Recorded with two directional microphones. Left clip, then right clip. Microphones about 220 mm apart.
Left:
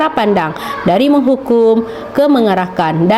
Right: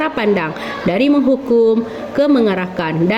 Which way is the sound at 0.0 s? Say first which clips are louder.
Left 4 dB; 30° left (ahead or behind).